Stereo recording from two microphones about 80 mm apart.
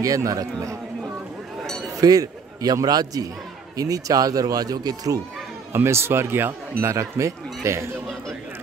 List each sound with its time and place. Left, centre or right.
0.0 s speech: right
2.0 s speech: right
5.7 s speech: right
7.0 s speech: right